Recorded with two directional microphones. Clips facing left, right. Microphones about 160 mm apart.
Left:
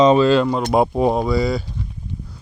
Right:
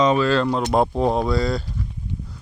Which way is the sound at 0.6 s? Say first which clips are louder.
Left 2 dB; 10° left (ahead or behind).